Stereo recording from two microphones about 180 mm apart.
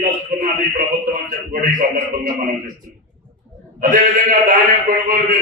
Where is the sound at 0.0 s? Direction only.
50° right (ahead or behind).